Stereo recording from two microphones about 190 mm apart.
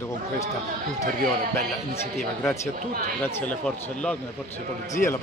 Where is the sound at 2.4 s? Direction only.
15° left (ahead or behind).